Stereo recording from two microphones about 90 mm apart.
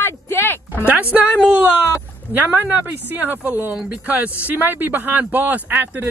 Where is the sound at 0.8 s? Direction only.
15° right (ahead or behind).